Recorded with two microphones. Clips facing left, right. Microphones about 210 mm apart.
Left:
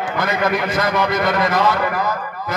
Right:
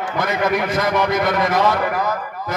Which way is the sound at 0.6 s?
15° right (ahead or behind).